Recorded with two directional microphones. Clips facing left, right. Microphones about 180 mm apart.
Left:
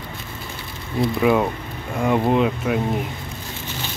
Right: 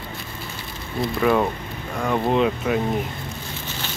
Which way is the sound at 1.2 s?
10° left (ahead or behind).